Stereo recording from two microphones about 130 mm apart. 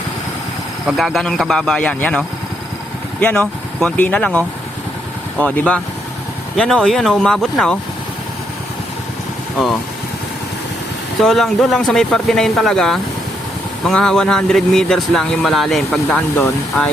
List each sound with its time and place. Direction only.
0.9 s speech: centre (ahead or behind)
11.2 s speech: centre (ahead or behind)
16.0 s speech: 15° left (ahead or behind)